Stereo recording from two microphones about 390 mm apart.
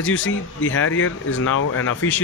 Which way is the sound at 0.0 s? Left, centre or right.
Left.